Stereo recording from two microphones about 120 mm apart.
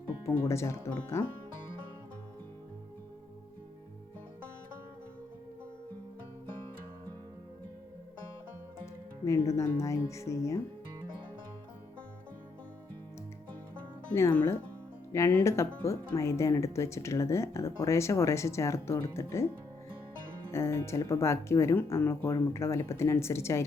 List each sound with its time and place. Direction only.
0.4 s speech: 25° left (ahead or behind)
9.2 s speech: 25° left (ahead or behind)
14.1 s speech: 25° left (ahead or behind)
20.5 s speech: 20° left (ahead or behind)